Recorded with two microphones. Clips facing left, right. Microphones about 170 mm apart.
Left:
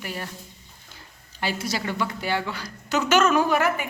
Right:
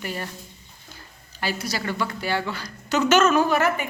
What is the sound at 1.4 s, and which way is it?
A woman's voice, 25° left (ahead or behind).